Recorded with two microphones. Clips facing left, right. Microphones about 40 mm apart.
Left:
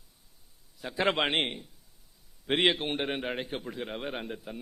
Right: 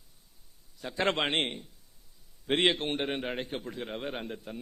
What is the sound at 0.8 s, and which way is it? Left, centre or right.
A man's voice, centre.